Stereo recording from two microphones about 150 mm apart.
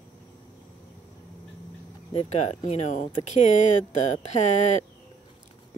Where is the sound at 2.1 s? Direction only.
45° left (ahead or behind).